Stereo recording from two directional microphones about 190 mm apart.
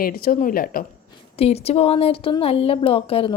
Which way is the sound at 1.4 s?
35° left (ahead or behind).